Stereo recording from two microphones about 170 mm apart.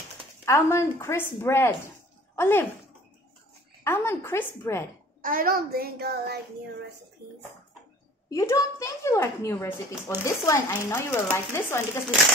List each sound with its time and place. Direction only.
0.5 s a woman's voice: 15° left (ahead or behind)
3.8 s a woman's voice: 15° left (ahead or behind)
5.2 s a child's voice: 55° right (ahead or behind); by 6.4 s 70° right (ahead or behind)
8.3 s a woman's voice: 20° left (ahead or behind)